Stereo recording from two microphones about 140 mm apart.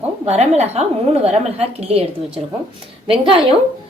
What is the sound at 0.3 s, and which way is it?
A woman's voice, 50° right (ahead or behind).